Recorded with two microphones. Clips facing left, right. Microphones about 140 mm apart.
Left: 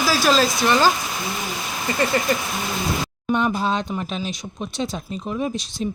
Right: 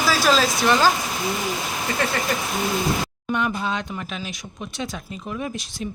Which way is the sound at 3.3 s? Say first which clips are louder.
Left 3 dB; 30° left (ahead or behind).